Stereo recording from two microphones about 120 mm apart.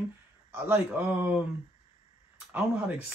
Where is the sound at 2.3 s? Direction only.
15° right (ahead or behind).